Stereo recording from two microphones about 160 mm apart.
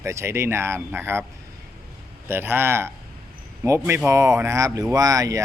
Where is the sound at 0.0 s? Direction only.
15° right (ahead or behind).